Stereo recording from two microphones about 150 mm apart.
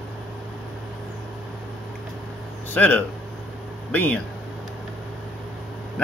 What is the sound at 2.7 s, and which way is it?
Speech, 10° left (ahead or behind).